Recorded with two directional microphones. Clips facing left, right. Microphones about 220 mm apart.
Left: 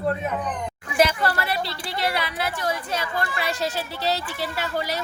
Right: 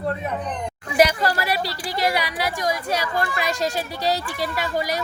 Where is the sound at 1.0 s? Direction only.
15° right (ahead or behind).